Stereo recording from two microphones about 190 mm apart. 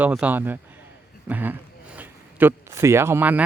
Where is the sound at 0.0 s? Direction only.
10° right (ahead or behind).